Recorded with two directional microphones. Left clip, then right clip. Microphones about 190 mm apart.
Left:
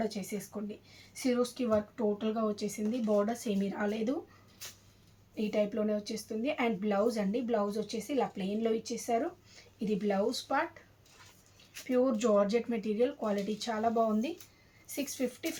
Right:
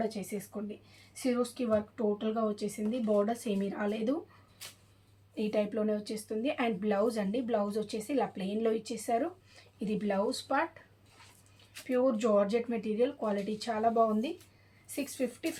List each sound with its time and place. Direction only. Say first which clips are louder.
0.0 s speech: right 1 dB; 10° right (ahead or behind)
5.3 s speech: even; 20° right (ahead or behind)
11.7 s speech: even; 15° right (ahead or behind)